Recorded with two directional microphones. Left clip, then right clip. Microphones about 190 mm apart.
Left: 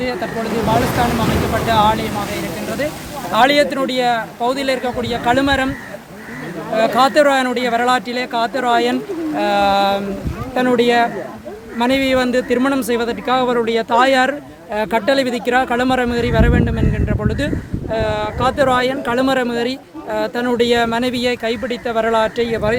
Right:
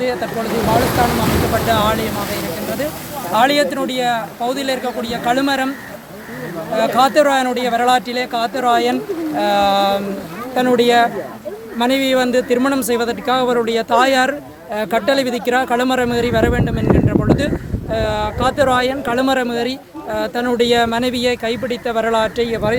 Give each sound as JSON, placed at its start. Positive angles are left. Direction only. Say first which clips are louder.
{"t": 0.0, "sound": "speech", "louder": "right 2 dB", "side_deg": -5}
{"t": 1.6, "sound": "speech", "louder": "left 5 dB", "side_deg": -15}
{"t": 3.3, "sound": "speech", "louder": "left 1 dB", "side_deg": 30}
{"t": 6.7, "sound": "speech", "louder": "even", "side_deg": 20}